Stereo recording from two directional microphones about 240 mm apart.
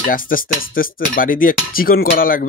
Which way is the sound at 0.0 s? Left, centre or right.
Left.